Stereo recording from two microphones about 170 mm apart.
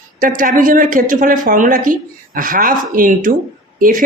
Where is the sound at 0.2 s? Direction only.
55° right (ahead or behind).